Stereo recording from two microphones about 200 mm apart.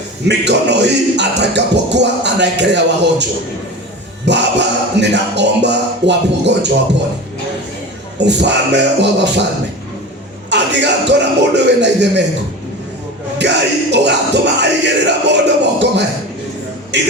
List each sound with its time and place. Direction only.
0.3 s speech: 60° right (ahead or behind)
4.3 s speech: 60° right (ahead or behind)
8.2 s speech: 60° right (ahead or behind)
10.5 s speech: 60° right (ahead or behind)
13.4 s speech: 60° right (ahead or behind)